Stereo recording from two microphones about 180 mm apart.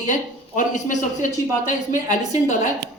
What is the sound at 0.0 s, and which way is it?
A man's voice, 45° left (ahead or behind).